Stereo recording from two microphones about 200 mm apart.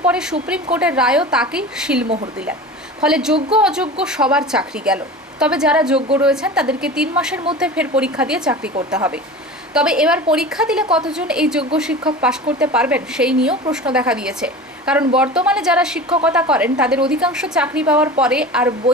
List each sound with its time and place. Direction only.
0.0 s a woman's voice: 5° right (ahead or behind)